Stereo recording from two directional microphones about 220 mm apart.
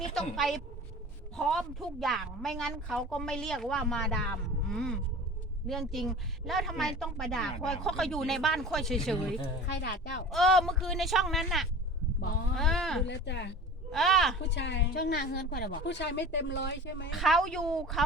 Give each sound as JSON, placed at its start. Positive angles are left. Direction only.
{"t": 0.1, "sound": "speech", "side_deg": 0}
{"t": 9.8, "sound": "a woman's voice", "side_deg": 50}
{"t": 10.2, "sound": "speech", "side_deg": 0}
{"t": 13.1, "sound": "a woman's voice", "side_deg": 50}
{"t": 13.9, "sound": "speech", "side_deg": 0}
{"t": 14.5, "sound": "a woman's voice", "side_deg": 50}
{"t": 17.1, "sound": "speech", "side_deg": 0}